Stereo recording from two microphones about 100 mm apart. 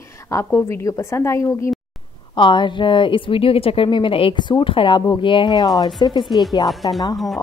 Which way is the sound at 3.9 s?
55° left (ahead or behind).